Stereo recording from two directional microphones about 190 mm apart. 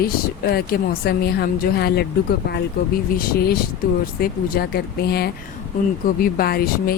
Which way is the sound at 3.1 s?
45° left (ahead or behind).